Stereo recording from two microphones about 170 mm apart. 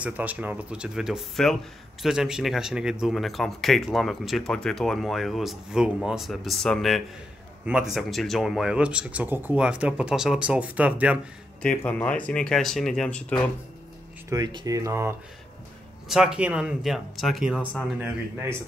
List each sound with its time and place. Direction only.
0.0 s speech: 10° right (ahead or behind)
11.6 s speech: 10° left (ahead or behind)
14.3 s speech: 25° right (ahead or behind)
16.1 s speech: 5° right (ahead or behind)